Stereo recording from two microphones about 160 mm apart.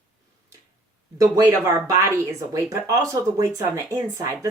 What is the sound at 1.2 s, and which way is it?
Speech, 20° right (ahead or behind).